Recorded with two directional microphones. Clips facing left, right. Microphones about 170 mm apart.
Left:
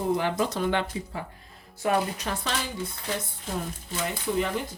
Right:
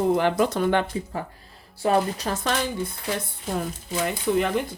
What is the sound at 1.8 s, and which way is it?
Speech, 35° right (ahead or behind).